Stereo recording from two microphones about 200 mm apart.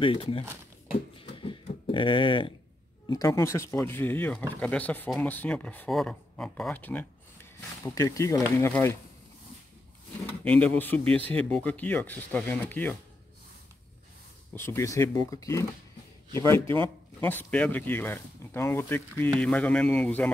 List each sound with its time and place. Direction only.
0.0 s speech: 25° left (ahead or behind)
1.1 s a sound: 25° left (ahead or behind)
3.1 s speech: 15° left (ahead or behind)
10.2 s speech: 5° left (ahead or behind)
14.5 s speech: 10° left (ahead or behind)